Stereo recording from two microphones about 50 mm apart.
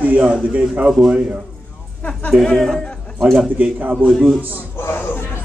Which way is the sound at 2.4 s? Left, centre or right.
Centre.